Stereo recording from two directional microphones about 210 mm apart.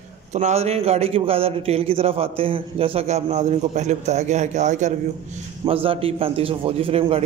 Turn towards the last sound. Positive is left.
turn(degrees=-30)  # may be behind; listen again after turning